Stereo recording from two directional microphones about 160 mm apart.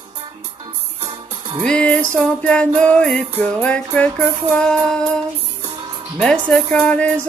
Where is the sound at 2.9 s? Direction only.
5° left (ahead or behind).